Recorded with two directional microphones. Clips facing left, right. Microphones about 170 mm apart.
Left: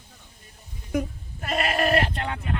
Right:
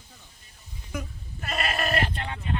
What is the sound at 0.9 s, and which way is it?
Bleat, 45° left (ahead or behind).